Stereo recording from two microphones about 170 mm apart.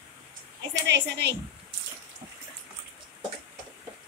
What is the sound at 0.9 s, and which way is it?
Speech, 90° right.